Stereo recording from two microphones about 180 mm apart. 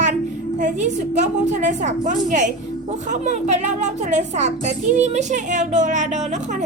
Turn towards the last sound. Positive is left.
turn(degrees=-40)  # may be behind; listen again after turning